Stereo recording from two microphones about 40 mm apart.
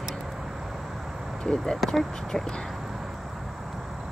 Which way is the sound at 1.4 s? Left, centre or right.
Centre.